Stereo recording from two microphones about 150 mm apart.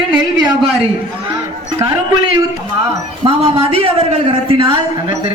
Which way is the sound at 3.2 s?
40° right (ahead or behind).